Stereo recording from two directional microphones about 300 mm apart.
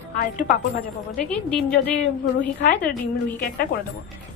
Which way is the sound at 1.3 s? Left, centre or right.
Centre.